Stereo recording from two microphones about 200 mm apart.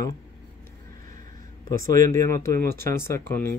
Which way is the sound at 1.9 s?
15° left (ahead or behind).